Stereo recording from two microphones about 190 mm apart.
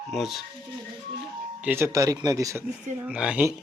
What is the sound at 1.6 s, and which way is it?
Speech, 10° right (ahead or behind).